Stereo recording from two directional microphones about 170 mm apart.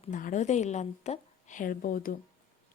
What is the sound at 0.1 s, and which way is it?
A woman's voice, 50° left (ahead or behind).